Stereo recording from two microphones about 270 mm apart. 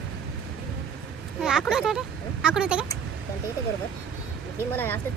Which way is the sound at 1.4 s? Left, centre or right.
Centre.